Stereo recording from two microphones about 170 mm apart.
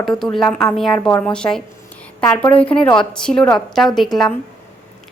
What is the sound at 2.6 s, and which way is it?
A woman's voice, 5° left (ahead or behind).